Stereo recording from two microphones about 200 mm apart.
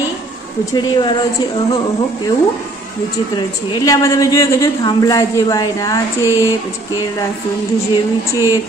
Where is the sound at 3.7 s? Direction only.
20° left (ahead or behind).